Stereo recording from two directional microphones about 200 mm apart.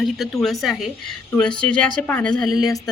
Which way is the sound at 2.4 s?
20° left (ahead or behind).